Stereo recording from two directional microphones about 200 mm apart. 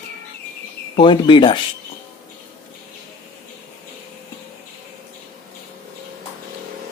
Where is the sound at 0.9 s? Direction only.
25° left (ahead or behind).